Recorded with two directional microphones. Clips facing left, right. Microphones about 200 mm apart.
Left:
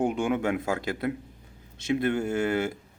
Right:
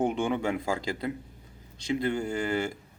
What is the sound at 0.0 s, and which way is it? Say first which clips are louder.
Speech: left 1 dB; centre (ahead or behind).